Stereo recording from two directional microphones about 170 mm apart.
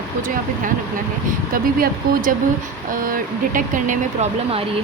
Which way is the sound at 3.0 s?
55° right (ahead or behind).